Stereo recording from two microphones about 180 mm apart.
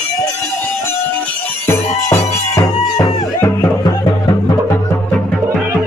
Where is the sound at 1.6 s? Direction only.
15° left (ahead or behind).